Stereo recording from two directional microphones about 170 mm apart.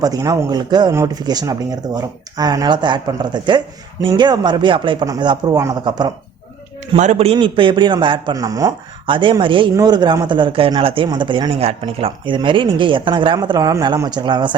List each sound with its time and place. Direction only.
0.0 s a man's voice: 20° right (ahead or behind)
6.9 s a man's voice: 40° right (ahead or behind)